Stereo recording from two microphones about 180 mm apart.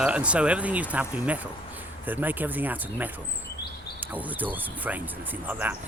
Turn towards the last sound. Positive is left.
turn(degrees=-10)  # may be behind; listen again after turning